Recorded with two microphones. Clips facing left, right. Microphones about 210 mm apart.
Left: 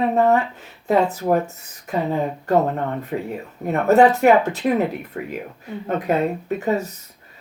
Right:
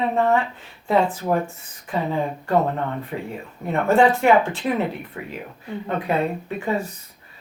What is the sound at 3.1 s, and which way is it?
Speech, 50° left (ahead or behind).